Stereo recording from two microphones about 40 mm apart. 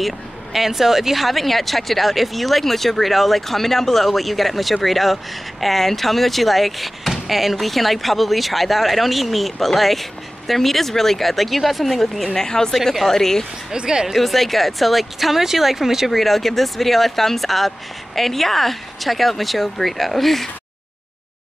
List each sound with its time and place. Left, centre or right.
0.0 s speech: centre
12.4 s a woman's voice: centre
12.7 s a woman's voice: centre
13.7 s speech: centre
14.1 s speech: centre
16.1 s speech: centre